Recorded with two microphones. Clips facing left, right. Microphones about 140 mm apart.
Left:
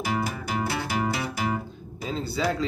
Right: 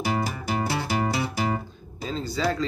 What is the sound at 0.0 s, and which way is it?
Music, 35° right (ahead or behind).